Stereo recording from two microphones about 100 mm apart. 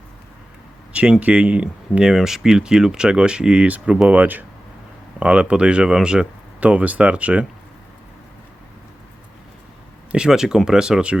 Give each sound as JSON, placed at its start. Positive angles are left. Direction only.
{"t": 0.9, "sound": "speech", "side_deg": -10}
{"t": 10.1, "sound": "speech", "side_deg": -5}